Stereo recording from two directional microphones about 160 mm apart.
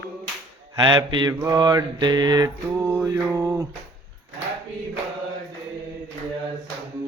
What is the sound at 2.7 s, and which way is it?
Mantra, 10° right (ahead or behind).